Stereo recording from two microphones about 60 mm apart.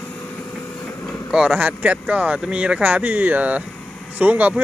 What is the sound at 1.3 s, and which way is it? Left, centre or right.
Speech, centre.